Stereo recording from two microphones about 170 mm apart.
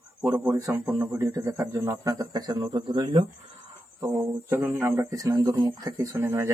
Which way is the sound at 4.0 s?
10° right (ahead or behind).